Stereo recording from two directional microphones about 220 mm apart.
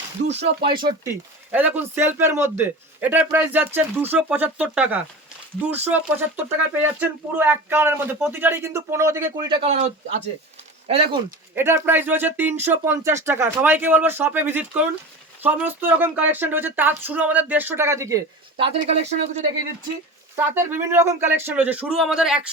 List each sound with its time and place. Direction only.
0.3 s speech: 25° right (ahead or behind)
1.5 s speech: 10° right (ahead or behind); by 9.8 s 25° right (ahead or behind)
10.8 s speech: 25° right (ahead or behind)
11.9 s speech: 10° right (ahead or behind); by 19.4 s 30° right (ahead or behind)
20.3 s speech: 10° right (ahead or behind)